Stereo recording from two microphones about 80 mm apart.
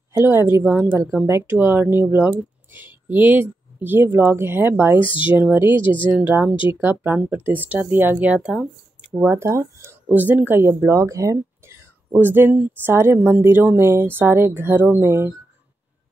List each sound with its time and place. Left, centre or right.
0.1 s speech: right
5.0 s speech: left
5.4 s speech: right
9.3 s speech: right
10.0 s speech: right